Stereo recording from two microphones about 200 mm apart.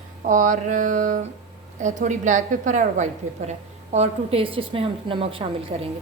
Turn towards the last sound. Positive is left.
turn(degrees=-30)  # may be behind; listen again after turning